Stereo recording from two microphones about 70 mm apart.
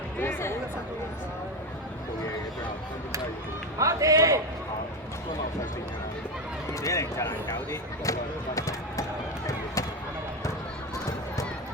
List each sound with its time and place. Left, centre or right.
0.2 s speech: left
3.8 s a man's voice: right
6.8 s speech: left